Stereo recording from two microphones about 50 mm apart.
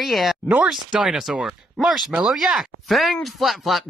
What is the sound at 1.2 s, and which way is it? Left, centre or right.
Speech, centre.